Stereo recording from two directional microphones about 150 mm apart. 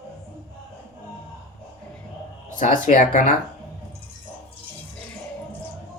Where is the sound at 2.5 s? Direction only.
60° left (ahead or behind).